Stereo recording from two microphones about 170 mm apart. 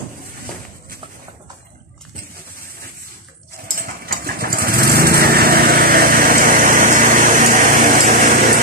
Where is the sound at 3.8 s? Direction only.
60° right (ahead or behind).